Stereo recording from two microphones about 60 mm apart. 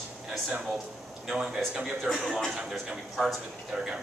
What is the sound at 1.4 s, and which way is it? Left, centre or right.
A man's voice, centre.